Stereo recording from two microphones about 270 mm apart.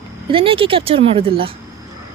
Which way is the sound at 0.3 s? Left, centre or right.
Centre.